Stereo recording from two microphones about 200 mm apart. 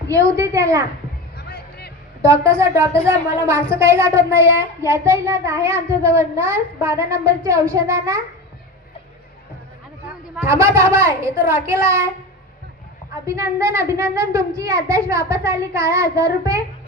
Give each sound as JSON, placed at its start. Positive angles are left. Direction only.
{"t": 0.1, "sound": "a child's voice", "side_deg": -15}
{"t": 1.4, "sound": "music", "side_deg": 55}
{"t": 2.2, "sound": "a child's voice", "side_deg": -15}
{"t": 10.4, "sound": "a child's voice", "side_deg": -15}
{"t": 13.2, "sound": "a child's voice", "side_deg": -15}